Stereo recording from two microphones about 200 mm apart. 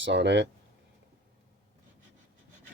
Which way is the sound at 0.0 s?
60° right (ahead or behind).